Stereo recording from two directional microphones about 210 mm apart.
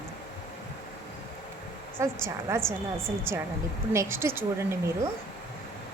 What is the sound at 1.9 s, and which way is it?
Speech, 10° right (ahead or behind).